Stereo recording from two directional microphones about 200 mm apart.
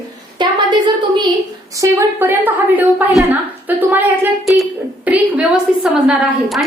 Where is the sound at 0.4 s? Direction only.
25° right (ahead or behind).